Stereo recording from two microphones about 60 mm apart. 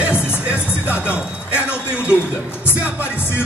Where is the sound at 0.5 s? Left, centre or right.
Right.